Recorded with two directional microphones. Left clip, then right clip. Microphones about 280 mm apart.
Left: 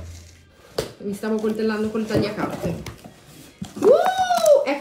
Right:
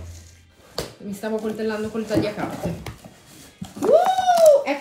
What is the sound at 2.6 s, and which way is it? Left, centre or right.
Speech, right.